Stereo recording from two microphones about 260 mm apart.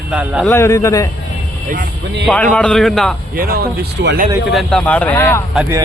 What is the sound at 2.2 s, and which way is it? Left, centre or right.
Speech, centre.